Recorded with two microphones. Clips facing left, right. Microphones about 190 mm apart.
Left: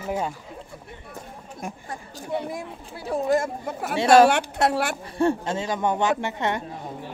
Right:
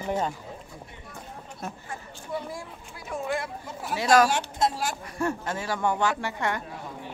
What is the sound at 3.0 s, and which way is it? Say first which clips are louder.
Speech: left 8 dB; 40° left (ahead or behind).